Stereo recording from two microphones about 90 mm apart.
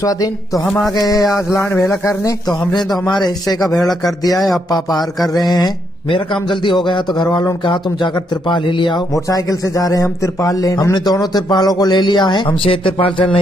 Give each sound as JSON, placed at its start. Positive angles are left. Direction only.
{"t": 0.7, "sound": "a sound", "side_deg": 10}
{"t": 0.9, "sound": "a man's voice", "side_deg": 45}
{"t": 1.3, "sound": "speech", "side_deg": 30}
{"t": 2.7, "sound": "a man's voice", "side_deg": 55}
{"t": 3.6, "sound": "a man's voice", "side_deg": 0}
{"t": 4.6, "sound": "a man's voice", "side_deg": 50}
{"t": 6.0, "sound": "a man's voice", "side_deg": 70}
{"t": 9.1, "sound": "a man's voice", "side_deg": 40}